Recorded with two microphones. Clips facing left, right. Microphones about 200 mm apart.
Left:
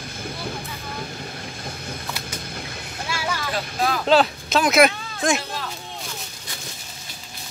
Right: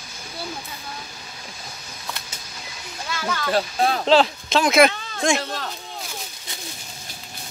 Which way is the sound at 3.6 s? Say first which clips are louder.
Right 4 dB; 30° right (ahead or behind).